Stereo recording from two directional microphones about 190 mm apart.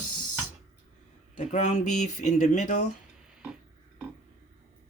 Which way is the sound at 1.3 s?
40° left (ahead or behind).